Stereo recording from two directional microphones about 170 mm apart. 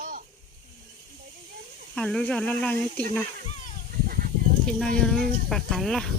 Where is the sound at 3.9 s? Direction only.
55° right (ahead or behind).